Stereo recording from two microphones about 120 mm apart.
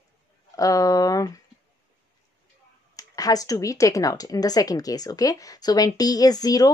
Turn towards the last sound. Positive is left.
turn(degrees=30)  # may be behind; listen again after turning